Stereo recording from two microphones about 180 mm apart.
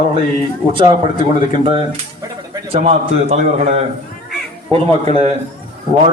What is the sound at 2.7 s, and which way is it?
A man's voice, 35° right (ahead or behind).